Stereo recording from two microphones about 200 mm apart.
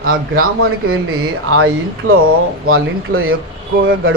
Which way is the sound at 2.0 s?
90° right.